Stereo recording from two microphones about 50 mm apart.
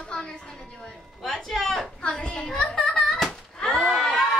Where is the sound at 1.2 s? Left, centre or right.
Centre.